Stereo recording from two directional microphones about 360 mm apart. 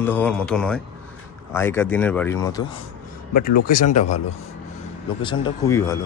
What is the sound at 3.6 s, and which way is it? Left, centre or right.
Speech, left.